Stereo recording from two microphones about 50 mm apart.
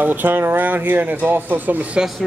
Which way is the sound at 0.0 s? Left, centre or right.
Right.